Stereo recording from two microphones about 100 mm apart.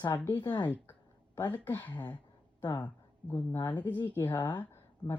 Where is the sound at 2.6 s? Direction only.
45° left (ahead or behind).